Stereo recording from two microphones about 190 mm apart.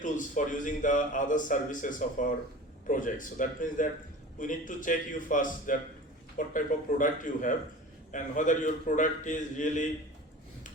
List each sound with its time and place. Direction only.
0.0 s a man's voice: 40° left (ahead or behind)